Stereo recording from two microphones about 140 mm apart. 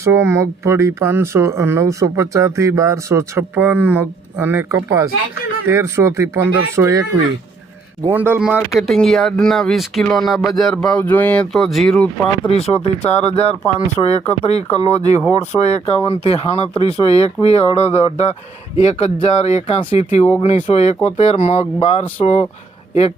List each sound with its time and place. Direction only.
0.0 s speech: 20° right (ahead or behind)
8.0 s speech: 15° right (ahead or behind); by 12.3 s 5° left (ahead or behind)
12.5 s speech: 45° left (ahead or behind)